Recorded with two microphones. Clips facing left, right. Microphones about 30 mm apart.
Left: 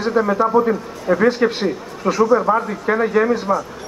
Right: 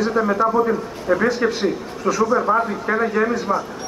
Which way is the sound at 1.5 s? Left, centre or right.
Left.